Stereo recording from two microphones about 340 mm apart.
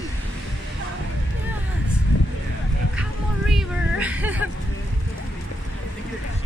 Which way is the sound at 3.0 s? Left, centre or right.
Centre.